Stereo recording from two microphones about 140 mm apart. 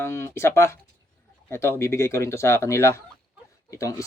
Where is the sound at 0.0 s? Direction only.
20° left (ahead or behind).